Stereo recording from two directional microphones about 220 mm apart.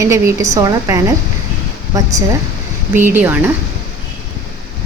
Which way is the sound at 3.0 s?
10° right (ahead or behind).